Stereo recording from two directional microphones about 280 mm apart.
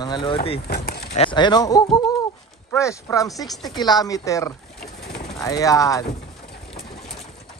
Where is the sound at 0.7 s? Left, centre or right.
Left.